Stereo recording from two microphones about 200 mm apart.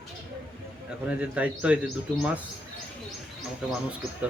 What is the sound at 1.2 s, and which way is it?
Speech, 5° right (ahead or behind).